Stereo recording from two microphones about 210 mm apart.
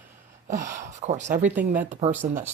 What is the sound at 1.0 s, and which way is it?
Speech, 35° right (ahead or behind).